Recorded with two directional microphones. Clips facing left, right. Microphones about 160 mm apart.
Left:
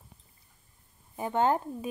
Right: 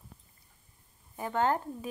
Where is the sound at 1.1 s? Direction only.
20° left (ahead or behind).